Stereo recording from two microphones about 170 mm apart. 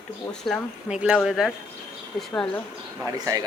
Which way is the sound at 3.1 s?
20° right (ahead or behind).